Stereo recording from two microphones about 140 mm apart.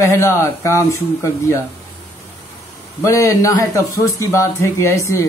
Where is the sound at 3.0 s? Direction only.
20° left (ahead or behind).